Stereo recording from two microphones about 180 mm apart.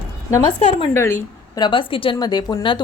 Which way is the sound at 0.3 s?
15° left (ahead or behind).